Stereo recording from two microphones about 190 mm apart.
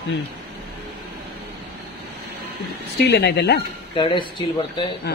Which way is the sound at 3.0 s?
60° left (ahead or behind).